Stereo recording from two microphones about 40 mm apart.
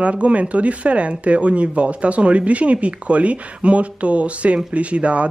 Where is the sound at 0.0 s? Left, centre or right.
Right.